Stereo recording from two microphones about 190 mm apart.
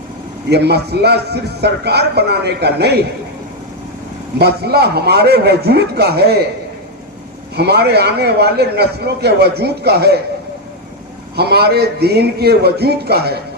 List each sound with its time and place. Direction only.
0.5 s a man's voice: 60° right (ahead or behind)
4.4 s a man's voice: 60° right (ahead or behind)
7.5 s a man's voice: 60° right (ahead or behind)
11.3 s a man's voice: 60° right (ahead or behind)